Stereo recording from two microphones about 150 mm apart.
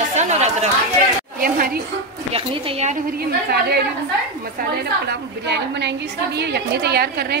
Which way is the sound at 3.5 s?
90° right.